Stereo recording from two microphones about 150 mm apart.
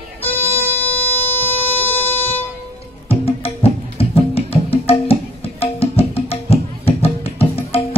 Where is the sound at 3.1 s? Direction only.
40° left (ahead or behind).